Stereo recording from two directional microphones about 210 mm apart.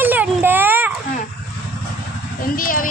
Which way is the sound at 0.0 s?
10° right (ahead or behind).